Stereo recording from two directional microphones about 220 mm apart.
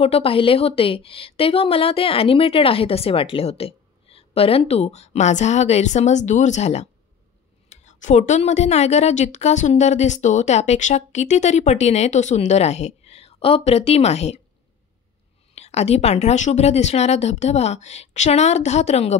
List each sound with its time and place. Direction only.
0.0 s a woman's voice: 25° left (ahead or behind)
15.5 s a woman's voice: 30° left (ahead or behind)